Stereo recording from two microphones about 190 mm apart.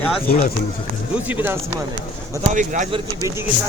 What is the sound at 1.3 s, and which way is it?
Speech, 10° right (ahead or behind).